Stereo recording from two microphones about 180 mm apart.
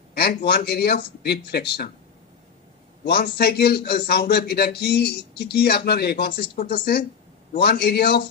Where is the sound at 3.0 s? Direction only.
65° left (ahead or behind).